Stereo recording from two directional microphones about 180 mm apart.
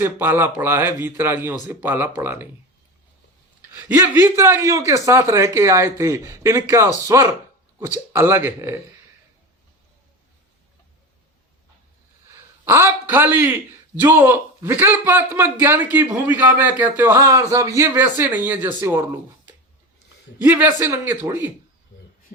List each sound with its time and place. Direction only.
0.0 s a man's voice: 10° right (ahead or behind)
3.8 s a man's voice: 10° right (ahead or behind)
12.6 s a man's voice: 15° right (ahead or behind)